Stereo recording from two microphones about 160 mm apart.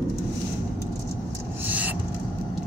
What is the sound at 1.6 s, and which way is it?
Owl, 10° right (ahead or behind).